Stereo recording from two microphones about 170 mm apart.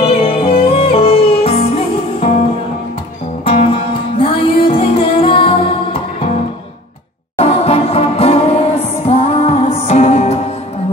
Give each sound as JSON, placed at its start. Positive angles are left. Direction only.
{"t": 0.0, "sound": "music", "side_deg": 35}
{"t": 3.4, "sound": "music", "side_deg": 35}
{"t": 7.3, "sound": "music", "side_deg": 35}